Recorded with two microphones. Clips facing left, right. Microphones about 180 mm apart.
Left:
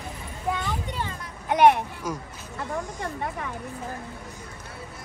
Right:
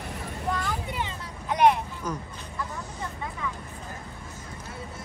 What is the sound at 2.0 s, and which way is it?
Speech, 10° left (ahead or behind).